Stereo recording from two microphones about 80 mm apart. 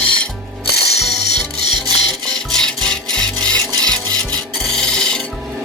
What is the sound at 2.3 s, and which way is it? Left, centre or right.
Wood, centre.